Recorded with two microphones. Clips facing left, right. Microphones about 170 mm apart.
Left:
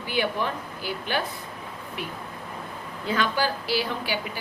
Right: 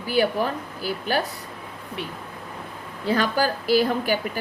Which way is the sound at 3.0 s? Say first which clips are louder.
Right 3 dB; 40° right (ahead or behind).